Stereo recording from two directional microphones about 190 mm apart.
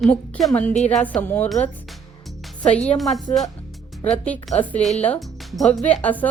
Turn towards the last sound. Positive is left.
turn(degrees=10)  # may be behind; listen again after turning